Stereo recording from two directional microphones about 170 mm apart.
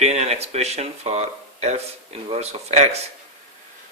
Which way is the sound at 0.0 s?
40° right (ahead or behind).